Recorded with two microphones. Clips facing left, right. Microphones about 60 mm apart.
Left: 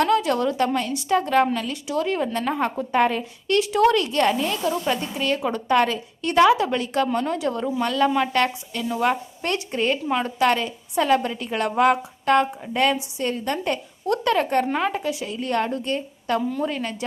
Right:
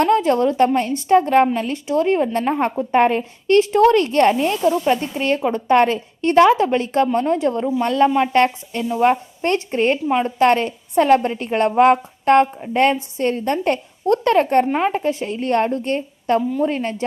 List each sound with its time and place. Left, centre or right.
0.0 s a woman's voice: right
14.6 s a woman's voice: right
14.9 s a woman's voice: right